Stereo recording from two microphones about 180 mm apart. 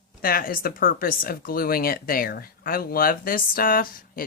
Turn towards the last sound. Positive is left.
turn(degrees=50)  # may be behind; listen again after turning